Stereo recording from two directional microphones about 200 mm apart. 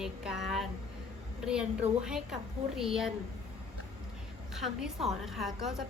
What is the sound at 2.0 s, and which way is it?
A woman's voice, 5° right (ahead or behind).